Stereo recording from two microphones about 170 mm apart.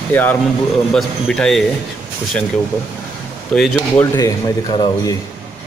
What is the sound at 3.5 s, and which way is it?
Speech, 5° left (ahead or behind).